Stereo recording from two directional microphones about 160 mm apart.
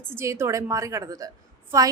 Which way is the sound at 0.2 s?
15° right (ahead or behind).